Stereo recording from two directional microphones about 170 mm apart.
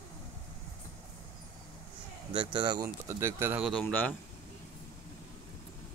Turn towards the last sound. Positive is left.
turn(degrees=10)  # may be behind; listen again after turning